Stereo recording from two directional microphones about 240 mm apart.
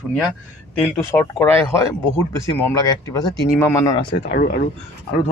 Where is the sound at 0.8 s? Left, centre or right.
Centre.